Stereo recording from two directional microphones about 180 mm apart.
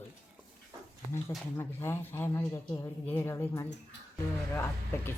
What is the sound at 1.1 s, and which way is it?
Speech, 15° left (ahead or behind).